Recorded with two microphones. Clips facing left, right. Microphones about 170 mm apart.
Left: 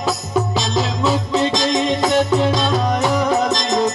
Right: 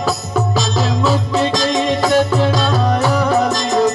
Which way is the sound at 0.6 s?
25° left (ahead or behind).